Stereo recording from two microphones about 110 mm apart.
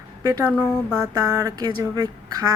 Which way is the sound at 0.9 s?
30° right (ahead or behind).